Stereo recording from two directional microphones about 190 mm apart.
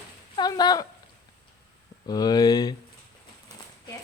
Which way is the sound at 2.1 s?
20° left (ahead or behind).